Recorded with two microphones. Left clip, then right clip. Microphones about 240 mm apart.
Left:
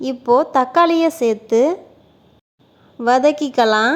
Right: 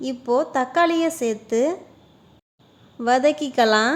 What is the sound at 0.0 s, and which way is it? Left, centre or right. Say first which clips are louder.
A woman's voice: left 6 dB; centre.